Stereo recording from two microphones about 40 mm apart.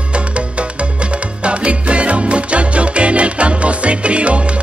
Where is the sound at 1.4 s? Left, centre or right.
Right.